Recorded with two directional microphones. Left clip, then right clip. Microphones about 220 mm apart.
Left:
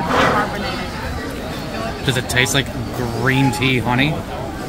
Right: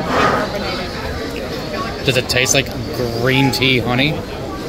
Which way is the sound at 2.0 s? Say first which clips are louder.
Right 3 dB; 15° left (ahead or behind).